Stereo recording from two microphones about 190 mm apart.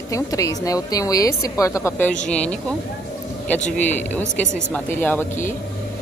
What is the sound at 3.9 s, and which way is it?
Speech, 10° left (ahead or behind).